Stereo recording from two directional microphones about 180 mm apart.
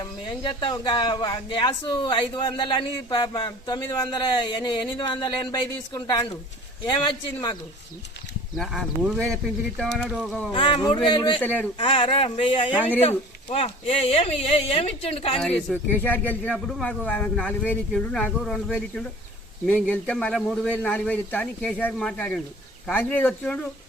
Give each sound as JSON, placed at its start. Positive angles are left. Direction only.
{"t": 0.0, "sound": "speech", "side_deg": 25}
{"t": 8.5, "sound": "speech", "side_deg": 0}
{"t": 10.5, "sound": "speech", "side_deg": 30}
{"t": 11.3, "sound": "speech", "side_deg": 10}
{"t": 11.8, "sound": "speech", "side_deg": 30}
{"t": 15.4, "sound": "speech", "side_deg": 5}